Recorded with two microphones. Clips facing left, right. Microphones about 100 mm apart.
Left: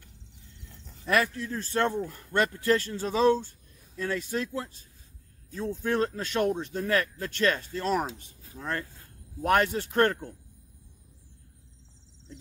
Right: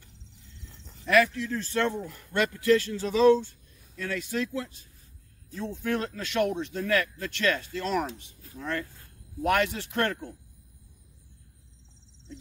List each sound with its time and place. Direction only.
1.1 s speech: 35° left (ahead or behind)